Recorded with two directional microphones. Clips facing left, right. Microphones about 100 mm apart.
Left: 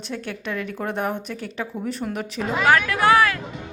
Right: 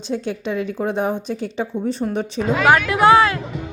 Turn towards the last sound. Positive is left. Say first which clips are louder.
# right 4 dB
turn(degrees=-25)  # may be behind; listen again after turning